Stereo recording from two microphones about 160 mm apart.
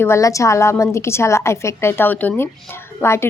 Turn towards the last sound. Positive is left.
turn(degrees=15)  # may be behind; listen again after turning